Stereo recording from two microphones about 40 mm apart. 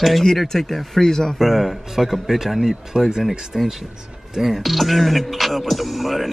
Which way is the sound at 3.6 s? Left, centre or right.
Centre.